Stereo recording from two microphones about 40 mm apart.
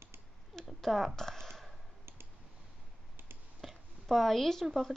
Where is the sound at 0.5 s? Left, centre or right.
Centre.